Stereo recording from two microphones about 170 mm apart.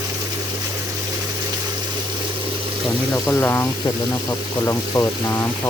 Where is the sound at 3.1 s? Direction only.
15° left (ahead or behind).